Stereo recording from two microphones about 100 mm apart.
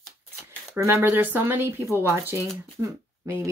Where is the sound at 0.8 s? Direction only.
30° right (ahead or behind).